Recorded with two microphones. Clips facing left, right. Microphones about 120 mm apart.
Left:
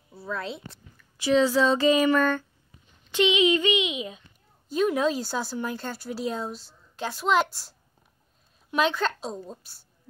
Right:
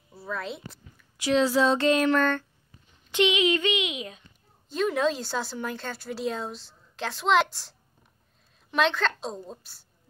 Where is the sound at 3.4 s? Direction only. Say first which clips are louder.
Left 3 dB; 5° left (ahead or behind).